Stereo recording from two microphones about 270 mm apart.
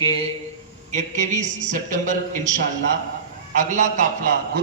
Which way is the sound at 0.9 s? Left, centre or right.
Right.